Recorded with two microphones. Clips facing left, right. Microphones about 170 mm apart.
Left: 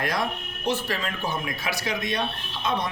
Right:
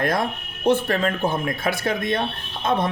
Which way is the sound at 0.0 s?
55° right (ahead or behind).